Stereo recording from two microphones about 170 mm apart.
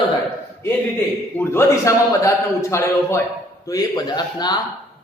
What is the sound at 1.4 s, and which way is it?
A man's voice, 15° left (ahead or behind).